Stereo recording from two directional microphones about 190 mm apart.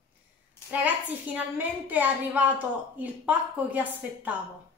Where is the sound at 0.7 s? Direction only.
10° right (ahead or behind).